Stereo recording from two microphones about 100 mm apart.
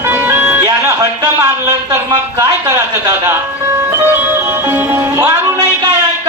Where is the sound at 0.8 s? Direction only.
30° right (ahead or behind).